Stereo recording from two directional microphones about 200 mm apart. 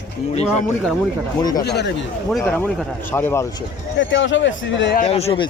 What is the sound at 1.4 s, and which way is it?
Speech, 20° left (ahead or behind).